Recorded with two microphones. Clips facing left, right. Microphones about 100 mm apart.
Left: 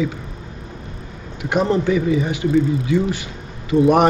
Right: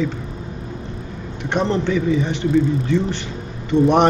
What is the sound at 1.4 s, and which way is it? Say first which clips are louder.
A man's voice: left 2 dB; 5° left (ahead or behind).